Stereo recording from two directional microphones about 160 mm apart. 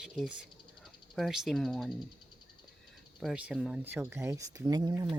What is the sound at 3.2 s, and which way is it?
Speech, centre (ahead or behind).